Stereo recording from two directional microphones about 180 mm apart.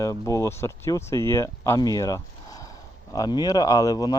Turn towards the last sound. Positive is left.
turn(degrees=20)  # may be behind; listen again after turning